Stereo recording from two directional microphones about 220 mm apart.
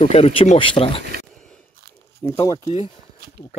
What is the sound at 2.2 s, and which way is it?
Speech, 20° left (ahead or behind).